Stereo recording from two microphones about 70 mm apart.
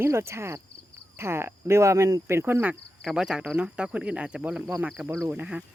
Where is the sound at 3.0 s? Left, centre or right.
Centre.